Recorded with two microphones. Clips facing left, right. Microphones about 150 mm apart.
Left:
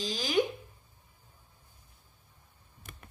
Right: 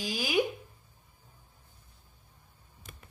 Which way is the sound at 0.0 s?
10° right (ahead or behind).